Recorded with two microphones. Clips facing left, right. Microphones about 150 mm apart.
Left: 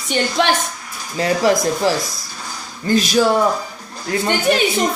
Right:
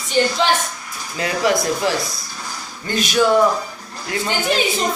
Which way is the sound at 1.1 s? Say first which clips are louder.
Left 3 dB; 35° left (ahead or behind).